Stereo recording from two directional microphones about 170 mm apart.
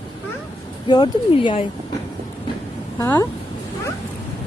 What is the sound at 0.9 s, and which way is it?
Speech, 25° left (ahead or behind).